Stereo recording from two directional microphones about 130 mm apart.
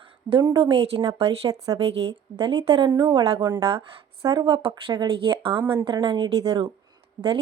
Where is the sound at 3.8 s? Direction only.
25° right (ahead or behind).